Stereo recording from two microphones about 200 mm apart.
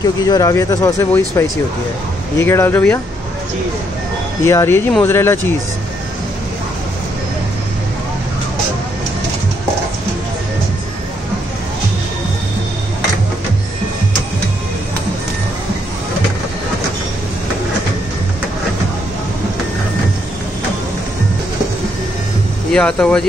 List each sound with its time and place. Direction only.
0.2 s speech: 15° left (ahead or behind)
2.4 s speech: 10° left (ahead or behind)
4.5 s speech: 15° left (ahead or behind)
22.7 s speech: 5° left (ahead or behind)